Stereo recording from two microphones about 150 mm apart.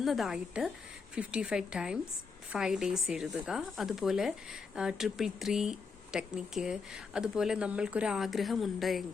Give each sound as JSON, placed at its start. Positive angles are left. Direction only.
{"t": 0.0, "sound": "speech", "side_deg": 0}